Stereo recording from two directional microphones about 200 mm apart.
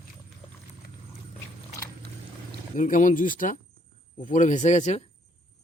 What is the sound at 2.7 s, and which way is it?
Speech, 40° left (ahead or behind).